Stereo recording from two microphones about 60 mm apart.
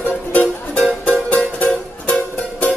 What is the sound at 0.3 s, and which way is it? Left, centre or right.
Music, left.